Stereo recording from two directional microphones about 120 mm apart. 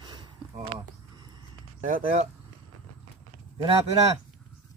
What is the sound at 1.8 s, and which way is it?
Speech, 90° right.